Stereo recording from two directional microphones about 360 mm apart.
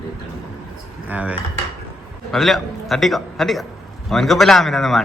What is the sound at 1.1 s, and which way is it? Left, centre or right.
A man's voice, centre.